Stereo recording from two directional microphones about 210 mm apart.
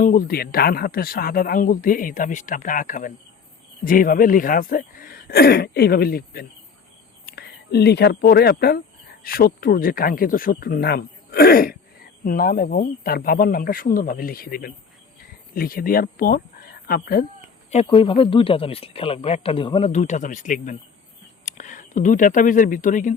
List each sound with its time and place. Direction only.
0.0 s speech: 40° left (ahead or behind)
17.7 s a man's voice: 30° left (ahead or behind)